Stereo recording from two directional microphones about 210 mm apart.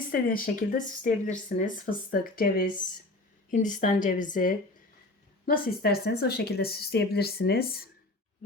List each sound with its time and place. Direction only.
0.1 s speech: 40° left (ahead or behind)
5.5 s a woman's voice: 50° left (ahead or behind)